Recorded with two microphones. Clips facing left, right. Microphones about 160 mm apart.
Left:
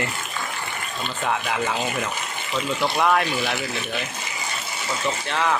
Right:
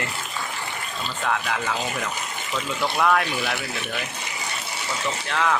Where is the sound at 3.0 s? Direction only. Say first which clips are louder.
Even; 5° left (ahead or behind).